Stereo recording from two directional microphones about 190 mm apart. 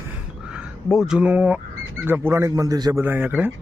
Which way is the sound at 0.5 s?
Centre (ahead or behind).